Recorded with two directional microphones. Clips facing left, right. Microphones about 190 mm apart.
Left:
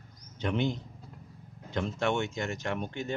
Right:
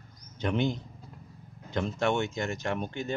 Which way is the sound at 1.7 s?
40° right (ahead or behind).